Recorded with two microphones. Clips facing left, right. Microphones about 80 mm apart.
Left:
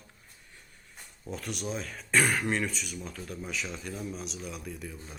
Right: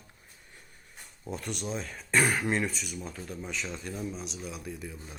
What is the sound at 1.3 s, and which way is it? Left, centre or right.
Speech, centre.